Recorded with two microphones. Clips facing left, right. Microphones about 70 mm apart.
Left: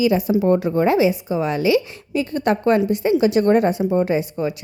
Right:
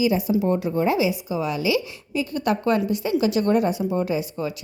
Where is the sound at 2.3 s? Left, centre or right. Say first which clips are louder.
Left 4 dB; left.